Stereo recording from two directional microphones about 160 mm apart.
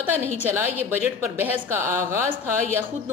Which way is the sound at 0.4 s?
15° right (ahead or behind).